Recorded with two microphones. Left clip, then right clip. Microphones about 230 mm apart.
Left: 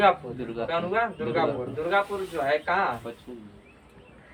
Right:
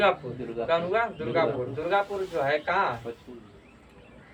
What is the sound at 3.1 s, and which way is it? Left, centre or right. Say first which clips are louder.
Speech: right 1 dB; left.